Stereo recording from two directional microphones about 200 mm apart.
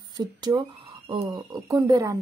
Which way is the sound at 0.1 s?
20° right (ahead or behind).